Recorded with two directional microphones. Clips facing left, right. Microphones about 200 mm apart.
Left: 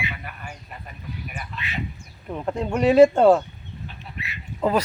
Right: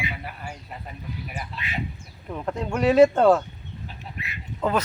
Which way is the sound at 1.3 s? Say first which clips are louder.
Right 1 dB; 30° right (ahead or behind).